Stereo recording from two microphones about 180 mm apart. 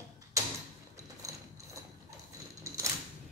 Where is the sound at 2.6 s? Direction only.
15° right (ahead or behind).